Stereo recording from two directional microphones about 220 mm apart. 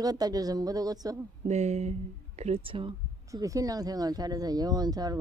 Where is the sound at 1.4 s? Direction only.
30° right (ahead or behind).